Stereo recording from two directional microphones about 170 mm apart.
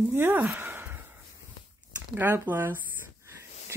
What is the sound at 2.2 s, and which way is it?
Speech, 10° right (ahead or behind).